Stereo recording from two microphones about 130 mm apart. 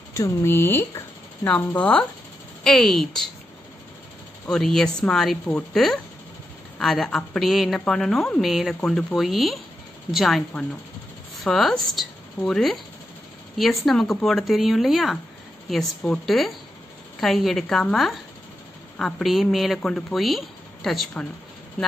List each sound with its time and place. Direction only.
0.1 s a woman's voice: 20° left (ahead or behind); by 3.2 s 5° left (ahead or behind)
4.5 s a woman's voice: 5° left (ahead or behind)